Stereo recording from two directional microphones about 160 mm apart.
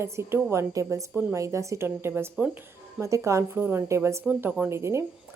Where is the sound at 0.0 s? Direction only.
15° right (ahead or behind).